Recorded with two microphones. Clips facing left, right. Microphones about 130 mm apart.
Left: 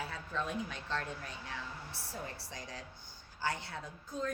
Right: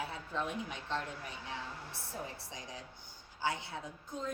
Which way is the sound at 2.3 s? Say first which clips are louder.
Left 1 dB; 20° right (ahead or behind).